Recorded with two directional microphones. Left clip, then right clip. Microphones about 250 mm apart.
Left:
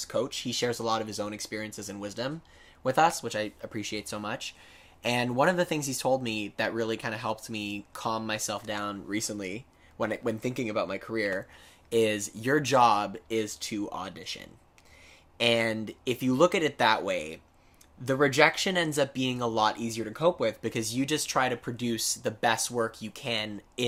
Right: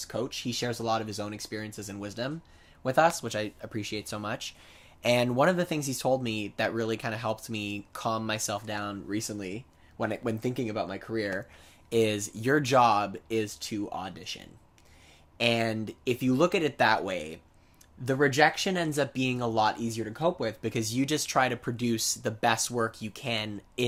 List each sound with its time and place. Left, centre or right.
0.0 s speech: centre